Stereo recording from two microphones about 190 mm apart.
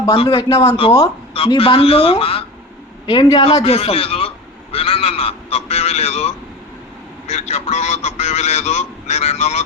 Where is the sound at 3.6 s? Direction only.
30° left (ahead or behind).